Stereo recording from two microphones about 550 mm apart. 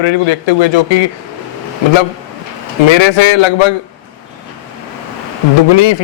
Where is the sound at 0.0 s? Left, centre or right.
Left.